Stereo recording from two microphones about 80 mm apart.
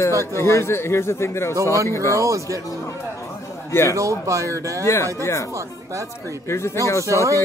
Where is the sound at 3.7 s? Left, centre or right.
Left.